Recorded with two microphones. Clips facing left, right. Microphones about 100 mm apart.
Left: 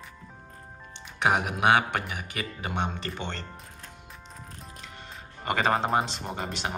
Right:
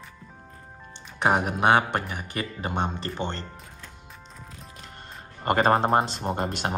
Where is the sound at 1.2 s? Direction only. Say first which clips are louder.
Right 2 dB; 35° right (ahead or behind).